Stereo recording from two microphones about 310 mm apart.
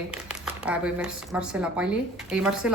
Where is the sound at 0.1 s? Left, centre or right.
Centre.